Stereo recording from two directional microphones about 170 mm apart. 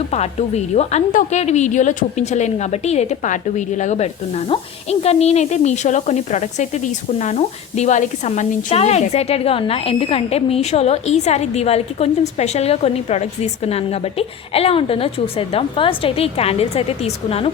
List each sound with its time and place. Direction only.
0.1 s a woman's voice: 40° left (ahead or behind)